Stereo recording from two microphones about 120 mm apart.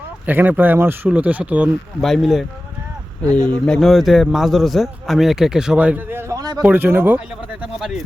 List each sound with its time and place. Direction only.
0.3 s speech: 15° right (ahead or behind)
2.0 s a man's voice: centre (ahead or behind); by 7.2 s 15° right (ahead or behind)
7.6 s a man's voice: centre (ahead or behind)